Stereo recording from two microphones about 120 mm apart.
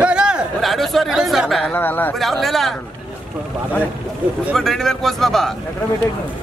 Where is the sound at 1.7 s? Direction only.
15° left (ahead or behind).